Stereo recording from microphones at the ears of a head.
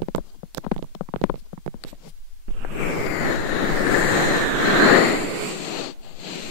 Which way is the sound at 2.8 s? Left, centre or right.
Left.